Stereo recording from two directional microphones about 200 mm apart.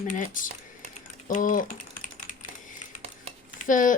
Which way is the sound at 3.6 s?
40° left (ahead or behind).